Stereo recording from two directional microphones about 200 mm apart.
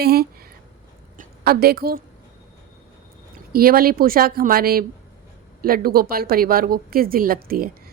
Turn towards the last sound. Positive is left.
turn(degrees=-50)  # may be behind; listen again after turning